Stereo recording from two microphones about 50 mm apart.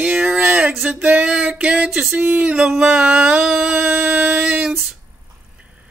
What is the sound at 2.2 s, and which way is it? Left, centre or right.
Music, right.